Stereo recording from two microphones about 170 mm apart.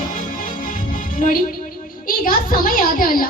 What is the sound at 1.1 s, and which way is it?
A child's voice, 55° left (ahead or behind).